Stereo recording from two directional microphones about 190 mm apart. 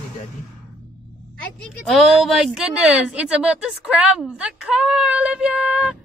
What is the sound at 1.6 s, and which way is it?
Speech, centre (ahead or behind).